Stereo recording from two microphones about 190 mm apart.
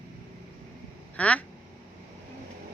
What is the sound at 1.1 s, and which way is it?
Speech, 5° left (ahead or behind).